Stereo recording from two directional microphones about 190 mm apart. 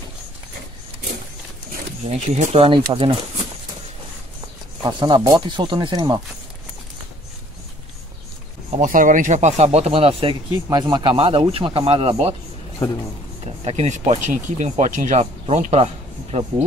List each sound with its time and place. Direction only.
2.2 s speech: 35° right (ahead or behind)
4.8 s speech: 25° right (ahead or behind)
8.6 s speech: 40° right (ahead or behind)
13.7 s speech: 35° right (ahead or behind)